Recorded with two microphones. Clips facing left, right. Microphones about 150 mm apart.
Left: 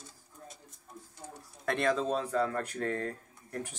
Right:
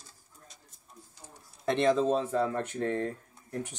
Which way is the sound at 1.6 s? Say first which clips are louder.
Right 4 dB; 25° right (ahead or behind).